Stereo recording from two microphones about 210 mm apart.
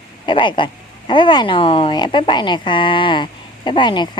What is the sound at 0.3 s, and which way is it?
Speech, 25° left (ahead or behind).